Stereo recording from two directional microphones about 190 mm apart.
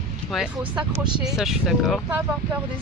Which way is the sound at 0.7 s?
25° right (ahead or behind).